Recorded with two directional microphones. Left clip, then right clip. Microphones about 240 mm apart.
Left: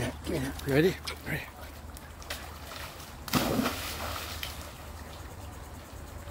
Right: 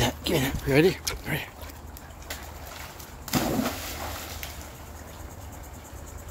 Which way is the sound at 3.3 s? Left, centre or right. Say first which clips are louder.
Right 2 dB; centre.